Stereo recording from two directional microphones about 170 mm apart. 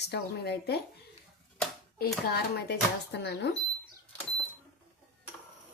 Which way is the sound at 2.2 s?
75° left (ahead or behind).